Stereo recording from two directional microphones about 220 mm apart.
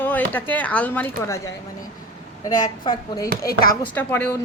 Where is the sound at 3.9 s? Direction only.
10° left (ahead or behind).